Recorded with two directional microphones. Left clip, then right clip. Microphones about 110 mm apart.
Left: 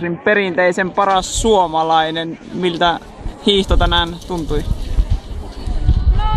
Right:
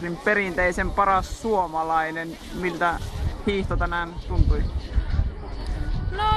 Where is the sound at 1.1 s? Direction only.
10° left (ahead or behind).